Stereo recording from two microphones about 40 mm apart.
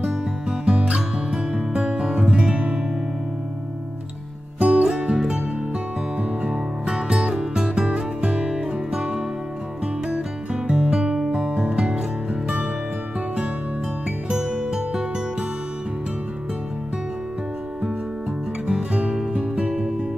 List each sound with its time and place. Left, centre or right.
0.5 s music: right
4.6 s music: right
4.8 s music: centre
14.3 s music: centre
18.7 s music: right